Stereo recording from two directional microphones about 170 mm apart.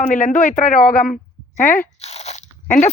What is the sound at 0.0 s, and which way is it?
Speech, 50° left (ahead or behind).